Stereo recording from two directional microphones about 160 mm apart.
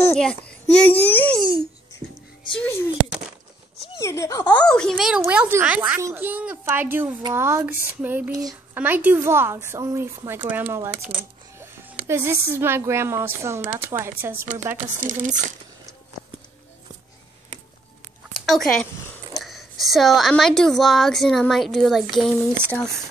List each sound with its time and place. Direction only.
0.1 s a child's voice: 5° left (ahead or behind)
1.4 s speech: 30° right (ahead or behind)
2.6 s speech: 15° left (ahead or behind)
4.0 s speech: 20° left (ahead or behind)
4.6 s a woman's voice: 5° left (ahead or behind); by 8.3 s 10° right (ahead or behind)
8.3 s speech: 20° right (ahead or behind)
8.7 s speech: 10° right (ahead or behind)
15.0 s speech: 50° right (ahead or behind)
18.3 s a woman's voice: centre (ahead or behind)